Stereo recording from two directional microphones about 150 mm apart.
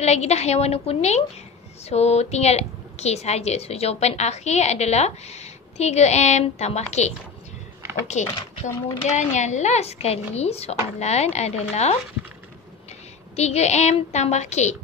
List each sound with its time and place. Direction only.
0.0 s a woman's voice: 45° left (ahead or behind)
7.8 s a sound: 15° right (ahead or behind)
9.0 s a woman's voice: 50° left (ahead or behind)
13.4 s a woman's voice: 45° left (ahead or behind)